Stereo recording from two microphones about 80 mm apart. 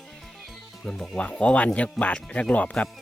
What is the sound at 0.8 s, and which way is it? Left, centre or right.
Speech, centre.